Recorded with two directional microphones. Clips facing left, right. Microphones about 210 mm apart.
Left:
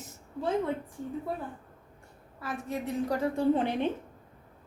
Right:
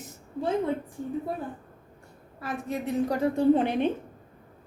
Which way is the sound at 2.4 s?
20° right (ahead or behind).